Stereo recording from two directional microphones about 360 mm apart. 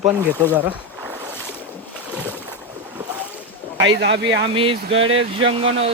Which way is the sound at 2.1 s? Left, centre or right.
Centre.